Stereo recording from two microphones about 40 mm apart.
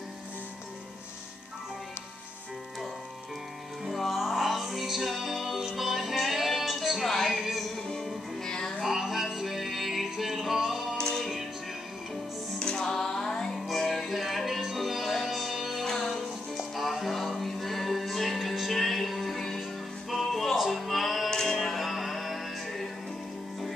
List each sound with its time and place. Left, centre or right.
3.8 s music: centre
8.8 s music: centre
11.0 s music: centre
12.5 s music: centre
15.8 s music: centre
16.7 s music: centre
21.3 s music: centre
21.5 s music: centre